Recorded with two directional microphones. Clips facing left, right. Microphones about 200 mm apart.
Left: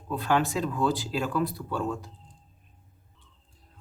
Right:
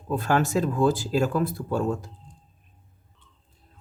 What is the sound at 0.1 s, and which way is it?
Speech, 45° right (ahead or behind).